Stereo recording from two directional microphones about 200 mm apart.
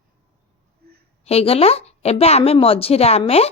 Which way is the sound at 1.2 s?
30° left (ahead or behind).